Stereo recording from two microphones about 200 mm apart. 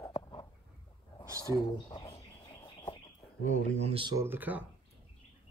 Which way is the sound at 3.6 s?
35° right (ahead or behind).